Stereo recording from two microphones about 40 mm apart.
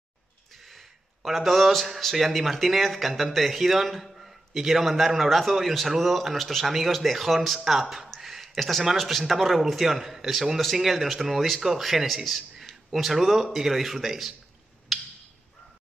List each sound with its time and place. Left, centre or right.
0.5 s a sound: centre
2.1 s a man's voice: centre
6.7 s a man's voice: centre